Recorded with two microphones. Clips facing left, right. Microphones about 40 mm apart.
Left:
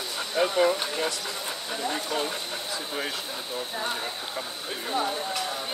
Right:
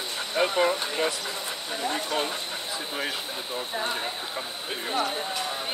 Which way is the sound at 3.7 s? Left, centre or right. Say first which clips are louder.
Right 2 dB; centre.